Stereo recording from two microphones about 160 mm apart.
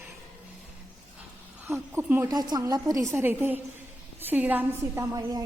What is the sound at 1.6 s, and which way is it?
Speech, 15° right (ahead or behind).